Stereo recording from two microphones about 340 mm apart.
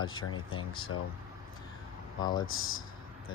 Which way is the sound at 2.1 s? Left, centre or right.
Centre.